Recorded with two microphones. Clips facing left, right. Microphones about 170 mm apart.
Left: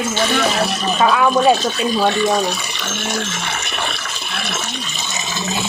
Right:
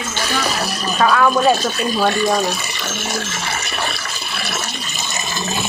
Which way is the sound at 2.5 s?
10° right (ahead or behind).